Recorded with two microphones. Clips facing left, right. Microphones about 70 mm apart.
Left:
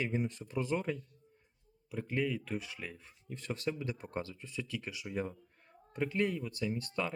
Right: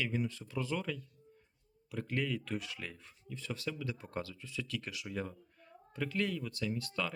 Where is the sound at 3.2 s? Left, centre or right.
Left.